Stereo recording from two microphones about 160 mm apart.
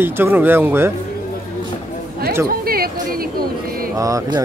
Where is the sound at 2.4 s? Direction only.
70° right (ahead or behind).